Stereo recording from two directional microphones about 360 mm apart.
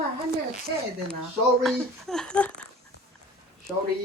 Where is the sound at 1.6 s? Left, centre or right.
Centre.